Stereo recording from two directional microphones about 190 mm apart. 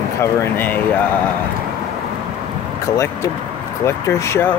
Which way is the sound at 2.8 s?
15° left (ahead or behind).